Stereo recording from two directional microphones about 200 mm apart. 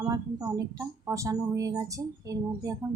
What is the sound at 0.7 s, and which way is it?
Speech, 15° right (ahead or behind).